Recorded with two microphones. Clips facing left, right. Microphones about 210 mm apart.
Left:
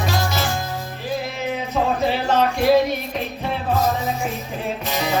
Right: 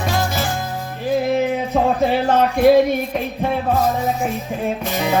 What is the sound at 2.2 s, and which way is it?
Music, 50° right (ahead or behind).